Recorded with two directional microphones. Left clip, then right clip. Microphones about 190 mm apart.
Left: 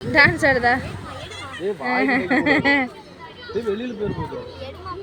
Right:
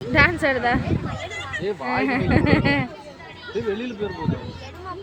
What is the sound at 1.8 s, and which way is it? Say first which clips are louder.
A woman's voice: left 4 dB; 15° left (ahead or behind).